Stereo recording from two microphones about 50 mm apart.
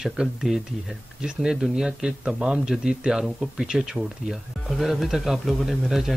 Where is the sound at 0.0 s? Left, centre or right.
Centre.